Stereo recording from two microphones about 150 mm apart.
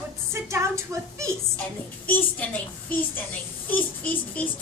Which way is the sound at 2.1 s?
10° left (ahead or behind).